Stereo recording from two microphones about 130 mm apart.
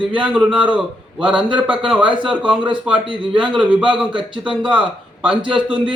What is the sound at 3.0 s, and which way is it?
Speech, 40° right (ahead or behind).